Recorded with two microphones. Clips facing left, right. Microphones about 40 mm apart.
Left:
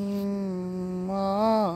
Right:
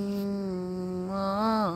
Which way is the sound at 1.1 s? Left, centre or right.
Centre.